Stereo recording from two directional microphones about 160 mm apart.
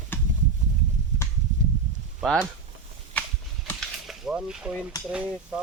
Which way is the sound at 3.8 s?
5° right (ahead or behind).